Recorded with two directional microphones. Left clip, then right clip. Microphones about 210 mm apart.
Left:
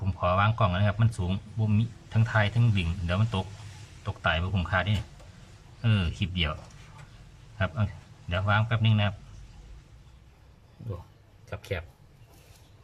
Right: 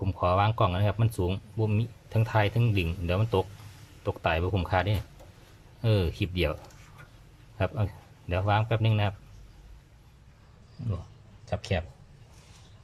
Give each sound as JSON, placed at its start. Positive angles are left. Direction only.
{"t": 0.0, "sound": "speech", "side_deg": -20}
{"t": 8.3, "sound": "speech", "side_deg": -20}
{"t": 11.4, "sound": "speech", "side_deg": 0}